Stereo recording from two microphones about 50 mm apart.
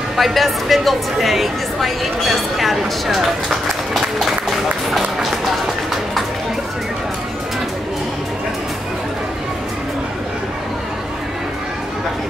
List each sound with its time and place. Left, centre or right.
0.1 s a woman's voice: centre
3.9 s music: centre